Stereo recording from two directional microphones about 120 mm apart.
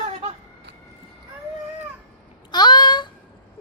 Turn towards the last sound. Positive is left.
turn(degrees=40)  # may be behind; listen again after turning